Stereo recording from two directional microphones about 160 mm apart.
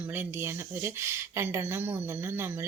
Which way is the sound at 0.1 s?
15° right (ahead or behind).